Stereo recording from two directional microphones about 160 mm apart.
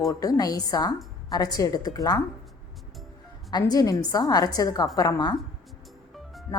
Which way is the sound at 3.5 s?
25° left (ahead or behind).